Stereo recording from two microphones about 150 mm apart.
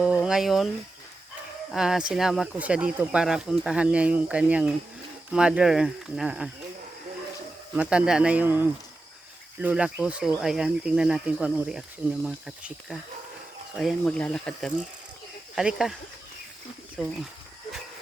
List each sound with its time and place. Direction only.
0.0 s a sound: 5° right (ahead or behind)
1.7 s speech: 5° right (ahead or behind)
7.8 s speech: 5° right (ahead or behind)
17.0 s speech: centre (ahead or behind)